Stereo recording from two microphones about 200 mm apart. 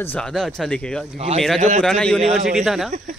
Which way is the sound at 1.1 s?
30° right (ahead or behind).